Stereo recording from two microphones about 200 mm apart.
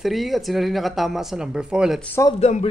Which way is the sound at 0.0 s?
Centre (ahead or behind).